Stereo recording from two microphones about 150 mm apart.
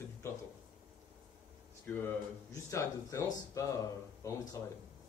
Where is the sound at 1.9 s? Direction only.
10° left (ahead or behind).